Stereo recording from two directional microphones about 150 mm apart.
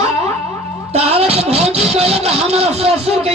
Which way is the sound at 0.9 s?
45° right (ahead or behind).